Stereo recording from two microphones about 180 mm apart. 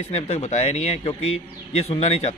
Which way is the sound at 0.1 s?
35° left (ahead or behind).